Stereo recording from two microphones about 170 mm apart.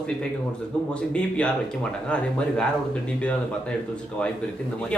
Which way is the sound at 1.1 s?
5° left (ahead or behind).